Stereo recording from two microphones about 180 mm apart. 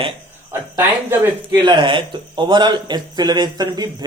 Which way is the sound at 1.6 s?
25° right (ahead or behind).